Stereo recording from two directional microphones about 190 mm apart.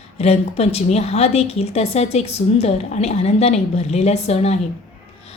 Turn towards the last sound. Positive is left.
turn(degrees=35)  # may be behind; listen again after turning